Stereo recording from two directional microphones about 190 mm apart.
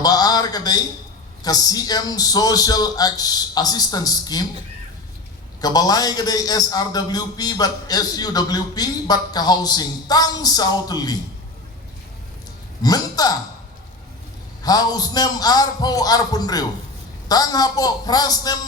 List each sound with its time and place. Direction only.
0.0 s a sound: 20° left (ahead or behind)
1.5 s a man's voice: 20° left (ahead or behind)
5.5 s a man's voice: 20° left (ahead or behind)
12.8 s a man's voice: 20° left (ahead or behind)
14.6 s a man's voice: 20° left (ahead or behind)